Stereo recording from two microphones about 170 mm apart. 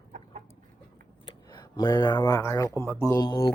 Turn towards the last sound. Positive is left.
turn(degrees=25)  # may be behind; listen again after turning